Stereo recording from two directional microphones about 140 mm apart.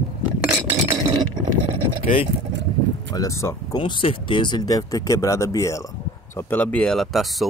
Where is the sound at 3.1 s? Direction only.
25° left (ahead or behind).